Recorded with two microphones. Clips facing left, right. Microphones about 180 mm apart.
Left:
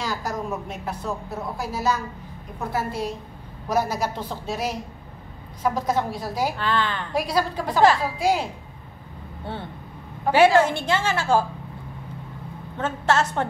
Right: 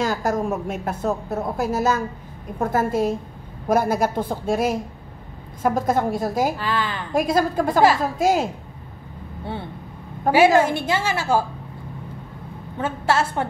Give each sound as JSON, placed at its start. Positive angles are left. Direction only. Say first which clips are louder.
{"t": 0.0, "sound": "a woman's voice", "louder": "right 6 dB", "side_deg": -50}
{"t": 6.6, "sound": "a woman's voice", "louder": "even", "side_deg": -10}
{"t": 7.1, "sound": "a woman's voice", "louder": "right 7 dB", "side_deg": -45}
{"t": 10.3, "sound": "a woman's voice", "louder": "right 2 dB", "side_deg": -45}
{"t": 10.6, "sound": "a woman's voice", "louder": "right 1 dB", "side_deg": -10}
{"t": 12.7, "sound": "a woman's voice", "louder": "right 1 dB", "side_deg": -10}